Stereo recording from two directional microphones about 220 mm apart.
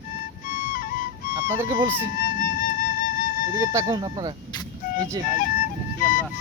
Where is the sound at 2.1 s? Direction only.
40° left (ahead or behind).